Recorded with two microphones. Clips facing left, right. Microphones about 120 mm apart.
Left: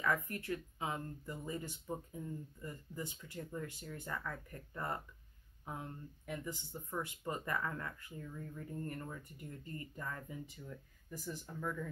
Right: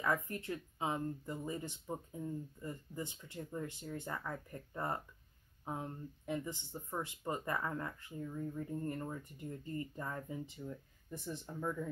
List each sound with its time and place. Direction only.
0.0 s speech: 25° right (ahead or behind)